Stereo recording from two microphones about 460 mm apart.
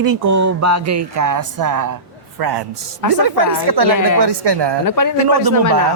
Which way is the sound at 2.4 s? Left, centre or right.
Right.